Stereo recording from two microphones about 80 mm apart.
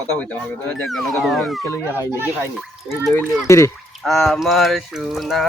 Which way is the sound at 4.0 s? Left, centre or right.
Centre.